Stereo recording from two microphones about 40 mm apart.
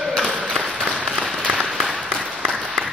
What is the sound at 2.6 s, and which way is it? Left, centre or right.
Applause, right.